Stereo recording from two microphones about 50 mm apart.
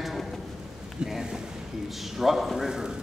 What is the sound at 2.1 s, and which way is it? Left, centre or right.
Speech, centre.